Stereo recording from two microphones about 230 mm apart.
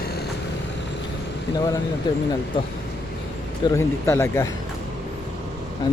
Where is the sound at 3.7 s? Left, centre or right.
Centre.